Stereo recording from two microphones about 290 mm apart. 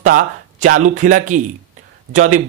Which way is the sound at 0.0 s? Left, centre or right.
Right.